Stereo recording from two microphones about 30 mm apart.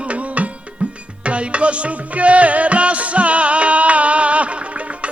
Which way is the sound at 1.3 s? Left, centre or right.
Right.